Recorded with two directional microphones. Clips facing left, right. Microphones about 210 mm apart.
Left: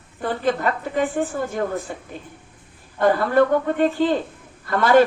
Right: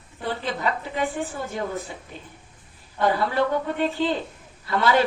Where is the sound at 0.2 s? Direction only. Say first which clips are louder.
Left 6 dB; 50° left (ahead or behind).